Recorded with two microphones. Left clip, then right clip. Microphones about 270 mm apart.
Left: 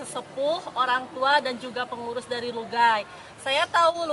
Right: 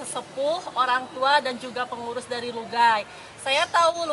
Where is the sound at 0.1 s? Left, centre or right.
Left.